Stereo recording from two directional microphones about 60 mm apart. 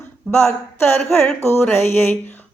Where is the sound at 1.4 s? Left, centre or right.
Left.